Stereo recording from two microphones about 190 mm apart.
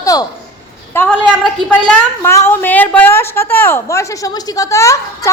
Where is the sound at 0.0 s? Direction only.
20° left (ahead or behind).